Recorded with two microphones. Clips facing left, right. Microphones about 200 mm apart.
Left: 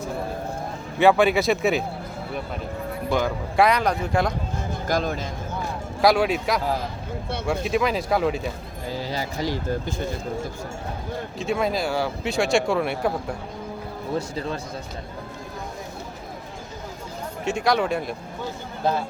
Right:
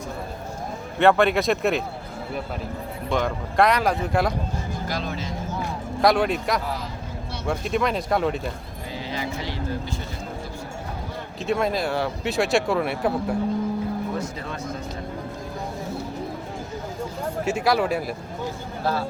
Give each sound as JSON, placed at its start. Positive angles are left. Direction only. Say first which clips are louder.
{"t": 0.9, "sound": "speech", "louder": "left 1 dB", "side_deg": 0}
{"t": 3.1, "sound": "speech", "louder": "even", "side_deg": 0}
{"t": 4.9, "sound": "speech", "louder": "left 7 dB", "side_deg": 45}
{"t": 6.0, "sound": "speech", "louder": "left 1 dB", "side_deg": 0}
{"t": 9.0, "sound": "a sound", "louder": "left 2 dB", "side_deg": 40}
{"t": 11.3, "sound": "speech", "louder": "right 1 dB", "side_deg": 0}
{"t": 14.2, "sound": "speech", "louder": "left 3 dB", "side_deg": 30}
{"t": 17.4, "sound": "speech", "louder": "even", "side_deg": -5}